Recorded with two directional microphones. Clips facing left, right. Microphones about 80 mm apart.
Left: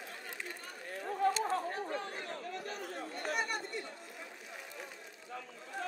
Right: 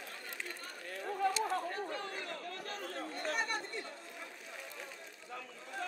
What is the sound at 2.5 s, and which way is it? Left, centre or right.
Chatter, centre.